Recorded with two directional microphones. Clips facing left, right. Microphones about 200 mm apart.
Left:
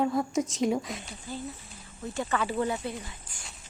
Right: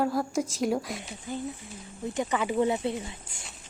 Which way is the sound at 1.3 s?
20° right (ahead or behind).